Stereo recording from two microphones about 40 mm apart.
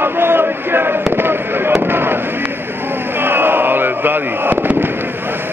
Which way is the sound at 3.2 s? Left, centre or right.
Right.